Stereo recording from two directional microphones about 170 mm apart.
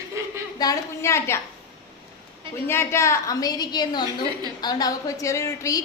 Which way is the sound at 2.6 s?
15° left (ahead or behind).